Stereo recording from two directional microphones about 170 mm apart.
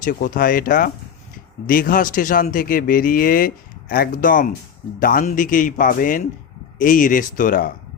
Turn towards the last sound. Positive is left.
turn(degrees=50)  # may be behind; listen again after turning